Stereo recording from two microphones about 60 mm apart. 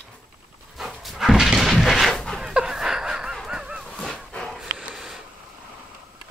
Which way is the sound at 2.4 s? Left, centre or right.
Centre.